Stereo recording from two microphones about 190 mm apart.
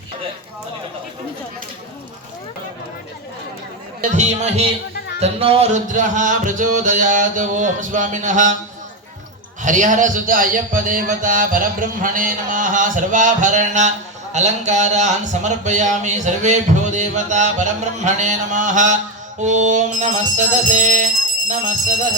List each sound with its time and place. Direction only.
4.1 s a man's voice: 35° right (ahead or behind)
9.6 s a man's voice: 40° right (ahead or behind)